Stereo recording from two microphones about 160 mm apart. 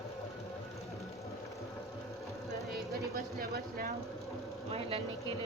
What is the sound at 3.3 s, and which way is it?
Speech, 65° right (ahead or behind).